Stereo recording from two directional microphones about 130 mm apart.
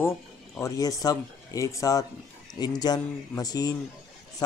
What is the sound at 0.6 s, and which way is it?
Speech, 30° left (ahead or behind).